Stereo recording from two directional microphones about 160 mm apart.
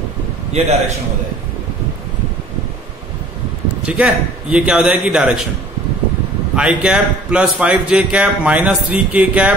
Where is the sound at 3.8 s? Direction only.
5° right (ahead or behind).